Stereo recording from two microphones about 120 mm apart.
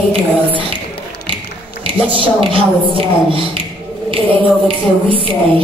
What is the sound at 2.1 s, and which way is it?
Speech, 50° right (ahead or behind).